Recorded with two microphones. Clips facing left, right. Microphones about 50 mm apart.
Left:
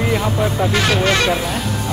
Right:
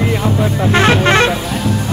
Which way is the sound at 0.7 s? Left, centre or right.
Right.